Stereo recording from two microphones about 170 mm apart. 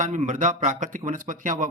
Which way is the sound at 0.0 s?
50° right (ahead or behind).